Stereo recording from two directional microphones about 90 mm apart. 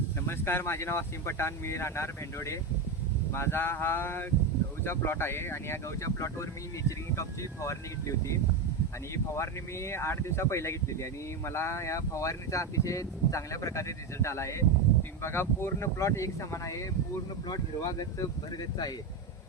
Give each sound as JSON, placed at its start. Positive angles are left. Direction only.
{"t": 0.3, "sound": "speech", "side_deg": 25}